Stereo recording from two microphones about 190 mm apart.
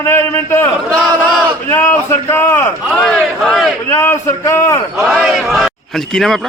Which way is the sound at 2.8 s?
Centre (ahead or behind).